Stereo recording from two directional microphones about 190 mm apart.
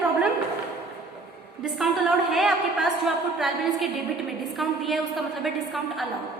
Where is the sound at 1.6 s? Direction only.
Centre (ahead or behind).